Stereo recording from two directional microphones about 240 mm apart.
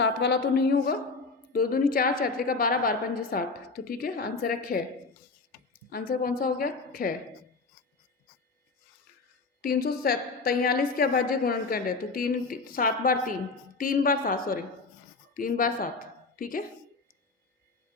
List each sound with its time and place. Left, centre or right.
0.0 s a woman's voice: left
5.9 s a woman's voice: left
9.6 s a woman's voice: left